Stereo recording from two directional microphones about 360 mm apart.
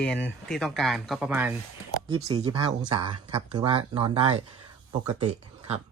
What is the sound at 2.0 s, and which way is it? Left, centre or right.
Speech, centre.